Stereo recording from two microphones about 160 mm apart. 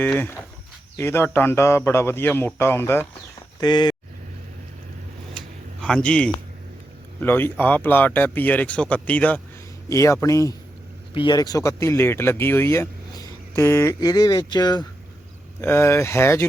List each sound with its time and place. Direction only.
0.9 s speech: 15° left (ahead or behind)
3.6 s speech: 25° left (ahead or behind)
5.8 s speech: 5° left (ahead or behind); by 14.8 s 25° left (ahead or behind)
15.6 s speech: 15° left (ahead or behind)